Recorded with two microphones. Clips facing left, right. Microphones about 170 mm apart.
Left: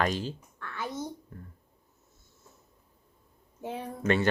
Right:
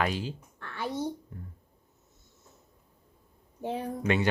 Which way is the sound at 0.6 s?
30° right (ahead or behind).